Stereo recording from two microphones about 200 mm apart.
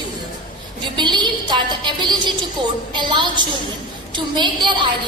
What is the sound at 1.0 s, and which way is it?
A woman's voice, 20° right (ahead or behind).